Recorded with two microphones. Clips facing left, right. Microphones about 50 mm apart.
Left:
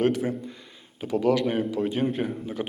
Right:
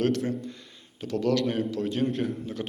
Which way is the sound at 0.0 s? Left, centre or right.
Centre.